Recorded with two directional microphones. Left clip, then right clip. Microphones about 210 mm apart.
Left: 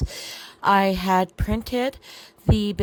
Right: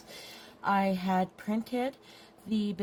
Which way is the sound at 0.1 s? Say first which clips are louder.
Left 11 dB; 35° left (ahead or behind).